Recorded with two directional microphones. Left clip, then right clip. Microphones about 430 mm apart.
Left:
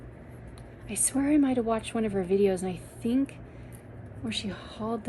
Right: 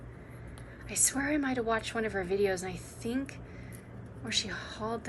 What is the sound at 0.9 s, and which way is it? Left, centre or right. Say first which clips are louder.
Speech: right 2 dB; centre.